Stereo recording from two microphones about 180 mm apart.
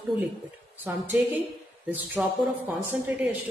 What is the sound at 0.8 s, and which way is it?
Speech, 10° right (ahead or behind).